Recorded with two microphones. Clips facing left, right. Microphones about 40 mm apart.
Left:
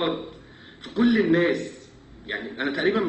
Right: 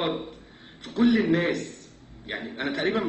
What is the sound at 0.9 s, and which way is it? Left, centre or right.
Speech, left.